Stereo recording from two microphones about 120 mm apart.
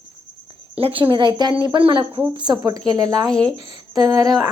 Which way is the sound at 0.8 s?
50° right (ahead or behind).